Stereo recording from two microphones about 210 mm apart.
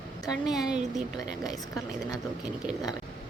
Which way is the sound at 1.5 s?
15° left (ahead or behind).